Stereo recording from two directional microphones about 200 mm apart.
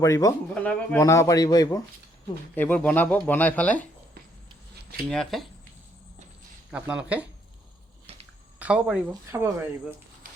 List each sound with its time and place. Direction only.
0.0 s a man's voice: 15° left (ahead or behind)
0.5 s a man's voice: 5° left (ahead or behind)
2.6 s a man's voice: 10° left (ahead or behind)
5.0 s speech: centre (ahead or behind)
6.7 s speech: 5° right (ahead or behind)
8.5 s speech: 5° right (ahead or behind)